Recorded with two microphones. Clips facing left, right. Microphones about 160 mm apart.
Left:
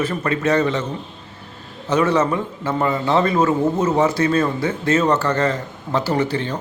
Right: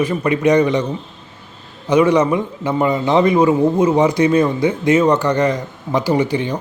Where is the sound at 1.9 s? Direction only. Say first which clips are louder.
Right 4 dB; 15° right (ahead or behind).